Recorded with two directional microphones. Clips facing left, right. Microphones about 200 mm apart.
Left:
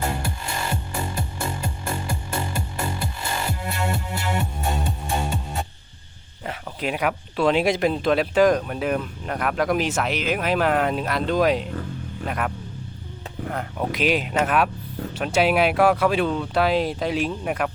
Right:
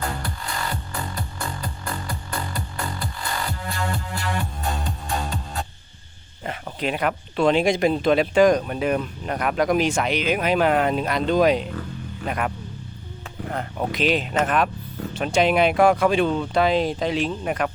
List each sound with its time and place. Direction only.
0.0 s music: 25° left (ahead or behind)
6.4 s speech: 5° left (ahead or behind)
13.5 s speech: 5° left (ahead or behind)